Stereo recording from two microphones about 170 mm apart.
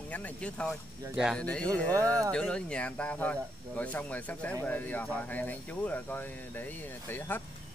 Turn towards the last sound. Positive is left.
turn(degrees=10)  # may be behind; listen again after turning